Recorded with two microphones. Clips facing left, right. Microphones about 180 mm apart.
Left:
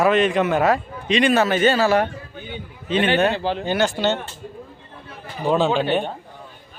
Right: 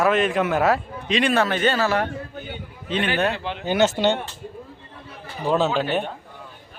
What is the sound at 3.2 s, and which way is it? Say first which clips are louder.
Speech: left 4 dB; 30° left (ahead or behind).